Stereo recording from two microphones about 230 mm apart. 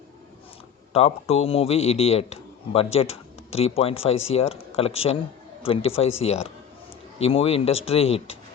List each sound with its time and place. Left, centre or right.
0.9 s a man's voice: left